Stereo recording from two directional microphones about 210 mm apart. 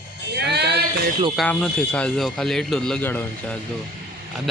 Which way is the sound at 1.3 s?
5° left (ahead or behind).